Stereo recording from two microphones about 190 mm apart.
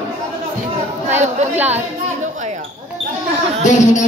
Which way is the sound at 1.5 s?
10° right (ahead or behind).